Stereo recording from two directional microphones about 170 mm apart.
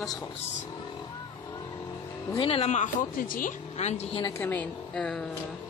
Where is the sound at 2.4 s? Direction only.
35° left (ahead or behind); by 3.5 s 55° left (ahead or behind).